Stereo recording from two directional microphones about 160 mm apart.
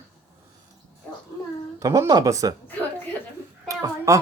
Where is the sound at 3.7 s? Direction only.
20° right (ahead or behind).